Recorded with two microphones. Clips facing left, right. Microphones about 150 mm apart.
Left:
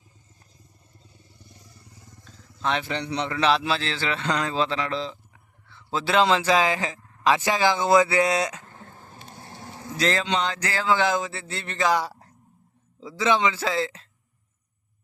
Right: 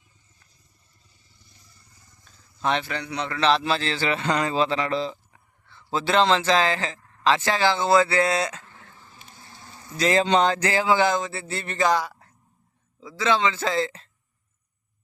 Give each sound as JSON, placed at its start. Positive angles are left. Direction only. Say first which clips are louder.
{"t": 1.0, "sound": "vehicle", "louder": "left 10 dB", "side_deg": 55}
{"t": 1.8, "sound": "a sound", "louder": "left 8 dB", "side_deg": 80}
{"t": 2.6, "sound": "a man's voice", "louder": "right 2 dB", "side_deg": -5}
{"t": 2.8, "sound": "a man's voice", "louder": "left 2 dB", "side_deg": 25}
{"t": 3.5, "sound": "speech", "louder": "right 1 dB", "side_deg": 0}
{"t": 8.6, "sound": "a sound", "louder": "left 4 dB", "side_deg": 45}
{"t": 10.2, "sound": "a sound", "louder": "right 6 dB", "side_deg": -45}
{"t": 10.6, "sound": "speech", "louder": "right 3 dB", "side_deg": -15}
{"t": 11.1, "sound": "speech", "louder": "right 1 dB", "side_deg": 0}
{"t": 13.0, "sound": "speech", "louder": "even", "side_deg": 25}
{"t": 13.6, "sound": "speech", "louder": "right 1 dB", "side_deg": 5}